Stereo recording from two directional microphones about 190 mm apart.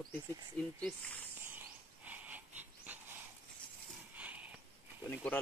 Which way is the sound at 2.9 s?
10° right (ahead or behind).